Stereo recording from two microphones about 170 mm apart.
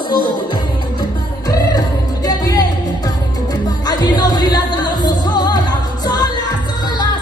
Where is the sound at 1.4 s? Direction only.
25° left (ahead or behind).